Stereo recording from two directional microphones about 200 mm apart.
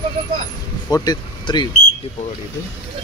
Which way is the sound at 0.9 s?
20° left (ahead or behind).